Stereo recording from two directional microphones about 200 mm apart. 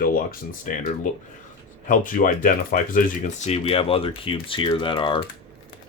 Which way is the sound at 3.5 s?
30° left (ahead or behind).